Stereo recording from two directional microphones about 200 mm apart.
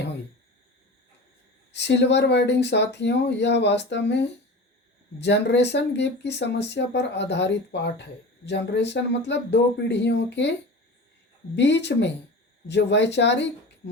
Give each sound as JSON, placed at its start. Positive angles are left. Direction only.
{"t": 1.7, "sound": "speech", "side_deg": 60}
{"t": 11.5, "sound": "speech", "side_deg": 60}